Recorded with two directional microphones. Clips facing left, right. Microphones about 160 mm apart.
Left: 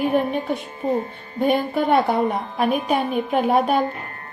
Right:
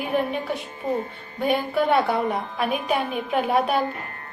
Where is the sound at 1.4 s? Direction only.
50° left (ahead or behind).